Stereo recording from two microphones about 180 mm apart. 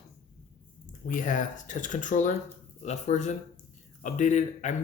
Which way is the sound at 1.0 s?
50° left (ahead or behind).